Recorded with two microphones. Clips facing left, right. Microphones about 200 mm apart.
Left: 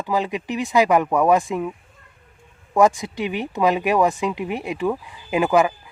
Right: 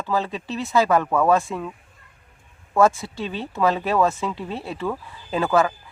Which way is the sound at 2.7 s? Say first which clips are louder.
Left 1 dB; 15° left (ahead or behind).